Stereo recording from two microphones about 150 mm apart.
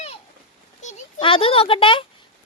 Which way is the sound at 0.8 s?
50° left (ahead or behind).